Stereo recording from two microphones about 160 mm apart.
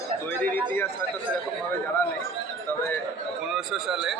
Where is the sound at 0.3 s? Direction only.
10° left (ahead or behind).